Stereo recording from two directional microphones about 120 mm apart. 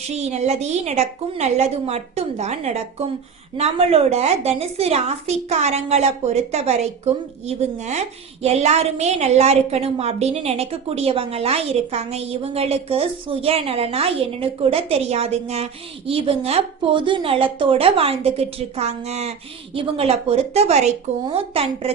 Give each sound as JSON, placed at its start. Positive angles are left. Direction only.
{"t": 0.1, "sound": "a woman's voice", "side_deg": -65}
{"t": 19.7, "sound": "a woman's voice", "side_deg": -50}